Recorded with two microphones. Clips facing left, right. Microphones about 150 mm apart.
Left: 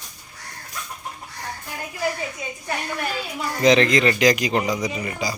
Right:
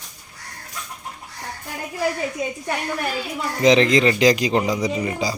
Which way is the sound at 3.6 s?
20° right (ahead or behind).